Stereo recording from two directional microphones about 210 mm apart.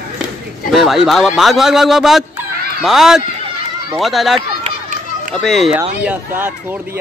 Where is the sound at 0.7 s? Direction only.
Centre (ahead or behind).